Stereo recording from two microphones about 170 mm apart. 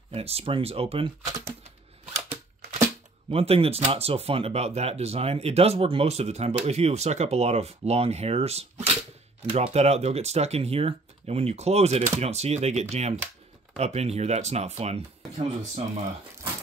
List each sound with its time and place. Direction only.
0.1 s speech: 35° right (ahead or behind)
3.3 s speech: 35° right (ahead or behind)